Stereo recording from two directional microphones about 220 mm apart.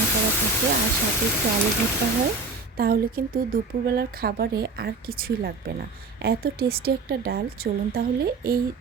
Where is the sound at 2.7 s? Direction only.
45° right (ahead or behind).